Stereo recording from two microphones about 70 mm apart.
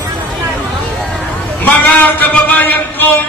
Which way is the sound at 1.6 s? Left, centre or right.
Left.